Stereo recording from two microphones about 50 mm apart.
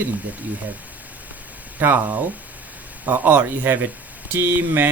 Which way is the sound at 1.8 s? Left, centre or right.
Right.